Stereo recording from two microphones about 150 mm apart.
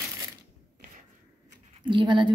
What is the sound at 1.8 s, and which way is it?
Speech, 30° right (ahead or behind).